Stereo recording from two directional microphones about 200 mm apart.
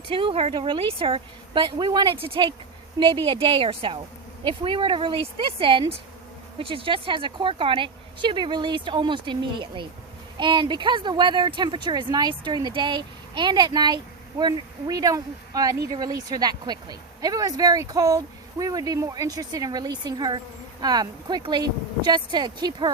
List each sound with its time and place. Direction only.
0.1 s speech: 25° right (ahead or behind)